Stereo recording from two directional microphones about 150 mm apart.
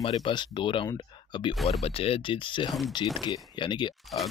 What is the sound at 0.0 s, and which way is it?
Speech, 35° left (ahead or behind).